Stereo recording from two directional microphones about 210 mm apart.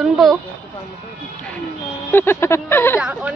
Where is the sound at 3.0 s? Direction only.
5° right (ahead or behind).